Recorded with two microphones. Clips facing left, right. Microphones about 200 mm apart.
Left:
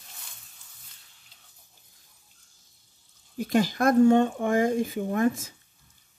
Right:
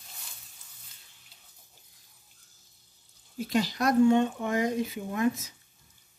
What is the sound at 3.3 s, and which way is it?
Speech, 50° left (ahead or behind).